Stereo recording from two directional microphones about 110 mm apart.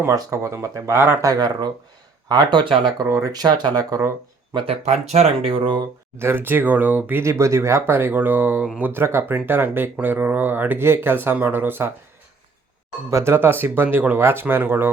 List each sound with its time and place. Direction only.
0.0 s speech: 25° right (ahead or behind)
1.3 s speech: 40° right (ahead or behind)
4.5 s speech: 65° right (ahead or behind)
6.1 s speech: 20° right (ahead or behind)
13.1 s speech: 25° right (ahead or behind)